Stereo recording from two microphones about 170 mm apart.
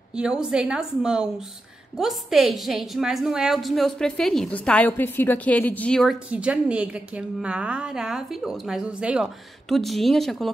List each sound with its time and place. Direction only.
0.1 s a woman's voice: 5° right (ahead or behind)
6.3 s a woman's voice: 5° right (ahead or behind)